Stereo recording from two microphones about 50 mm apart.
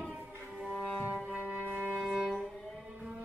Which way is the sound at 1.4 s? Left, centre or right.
Right.